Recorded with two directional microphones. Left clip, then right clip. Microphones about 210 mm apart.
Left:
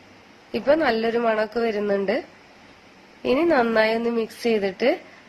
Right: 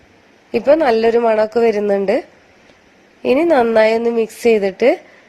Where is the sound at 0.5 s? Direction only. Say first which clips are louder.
Right 8 dB; 35° right (ahead or behind).